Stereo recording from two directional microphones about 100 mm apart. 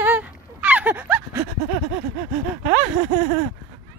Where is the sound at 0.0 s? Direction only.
15° right (ahead or behind).